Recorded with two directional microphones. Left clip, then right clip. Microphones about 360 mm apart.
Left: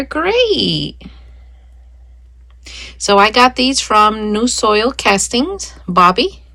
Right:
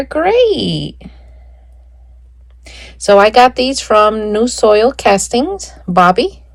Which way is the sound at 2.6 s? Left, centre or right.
Centre.